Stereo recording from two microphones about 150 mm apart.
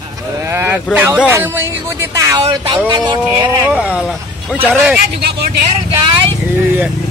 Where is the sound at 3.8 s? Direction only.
10° right (ahead or behind).